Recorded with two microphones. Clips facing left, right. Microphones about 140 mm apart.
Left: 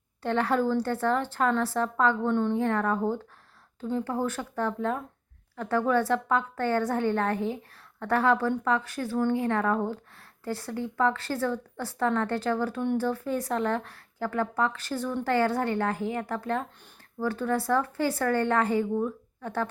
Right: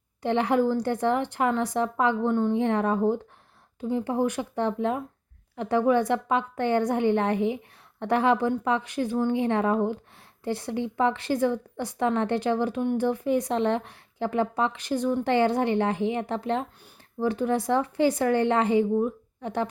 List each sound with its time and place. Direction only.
0.2 s speech: 15° right (ahead or behind)